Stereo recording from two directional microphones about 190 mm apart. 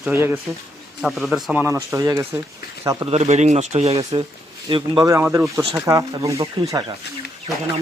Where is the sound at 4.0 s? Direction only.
20° right (ahead or behind).